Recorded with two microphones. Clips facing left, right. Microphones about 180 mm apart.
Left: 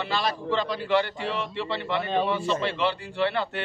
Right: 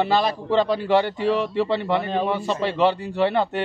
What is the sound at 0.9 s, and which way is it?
A man's voice, 40° right (ahead or behind).